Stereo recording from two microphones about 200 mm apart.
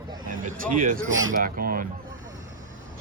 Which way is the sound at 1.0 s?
80° right.